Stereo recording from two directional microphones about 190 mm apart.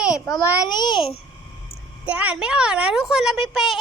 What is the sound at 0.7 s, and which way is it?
Speech, 20° left (ahead or behind).